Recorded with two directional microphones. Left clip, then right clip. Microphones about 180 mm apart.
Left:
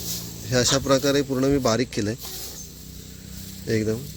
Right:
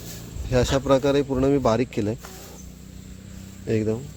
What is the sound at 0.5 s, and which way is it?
Speech, centre (ahead or behind).